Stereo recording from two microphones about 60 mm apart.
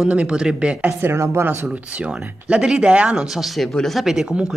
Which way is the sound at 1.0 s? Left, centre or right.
Right.